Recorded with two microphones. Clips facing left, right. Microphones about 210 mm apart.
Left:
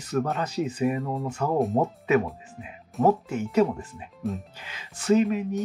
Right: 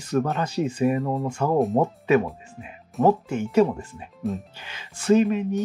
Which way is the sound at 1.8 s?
30° right (ahead or behind).